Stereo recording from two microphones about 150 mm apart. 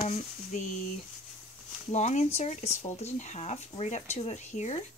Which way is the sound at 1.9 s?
50° left (ahead or behind).